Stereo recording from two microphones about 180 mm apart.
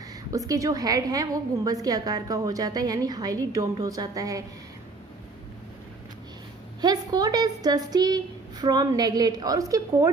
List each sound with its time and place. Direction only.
0.3 s a woman's voice: 20° right (ahead or behind)
6.8 s a woman's voice: 20° right (ahead or behind)